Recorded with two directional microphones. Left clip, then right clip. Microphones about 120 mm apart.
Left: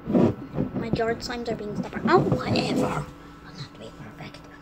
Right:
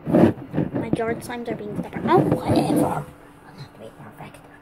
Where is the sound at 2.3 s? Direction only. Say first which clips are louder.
Right 5 dB; 35° left (ahead or behind).